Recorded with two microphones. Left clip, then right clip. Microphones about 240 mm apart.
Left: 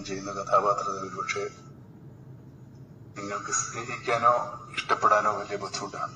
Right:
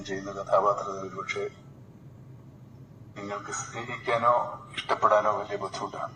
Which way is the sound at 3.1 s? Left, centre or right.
Centre.